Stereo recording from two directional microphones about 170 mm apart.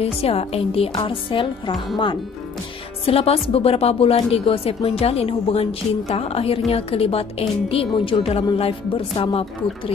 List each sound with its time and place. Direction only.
0.2 s a woman's voice: 35° left (ahead or behind)
3.1 s a woman's voice: 35° left (ahead or behind)